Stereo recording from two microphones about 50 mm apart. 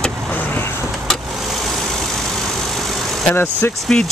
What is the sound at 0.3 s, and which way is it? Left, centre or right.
Vehicle, left.